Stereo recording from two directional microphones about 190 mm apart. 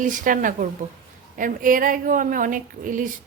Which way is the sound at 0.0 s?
45° right (ahead or behind).